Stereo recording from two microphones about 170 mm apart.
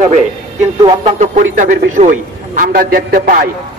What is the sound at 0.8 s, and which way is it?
Speech, 40° right (ahead or behind).